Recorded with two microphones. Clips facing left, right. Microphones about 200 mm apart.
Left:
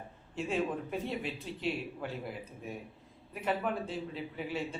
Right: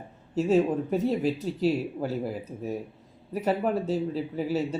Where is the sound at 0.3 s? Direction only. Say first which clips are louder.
Right 10 dB; 40° right (ahead or behind).